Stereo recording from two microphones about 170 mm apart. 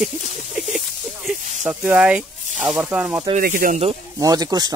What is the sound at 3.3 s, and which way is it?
Speech, 55° right (ahead or behind).